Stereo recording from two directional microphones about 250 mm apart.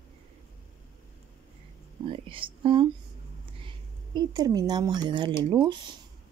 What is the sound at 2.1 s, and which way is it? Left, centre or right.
Speech, right.